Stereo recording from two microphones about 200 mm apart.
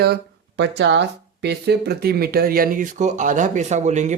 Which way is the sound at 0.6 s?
60° right (ahead or behind).